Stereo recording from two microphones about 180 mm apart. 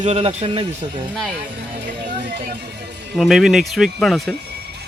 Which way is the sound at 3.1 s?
Centre (ahead or behind).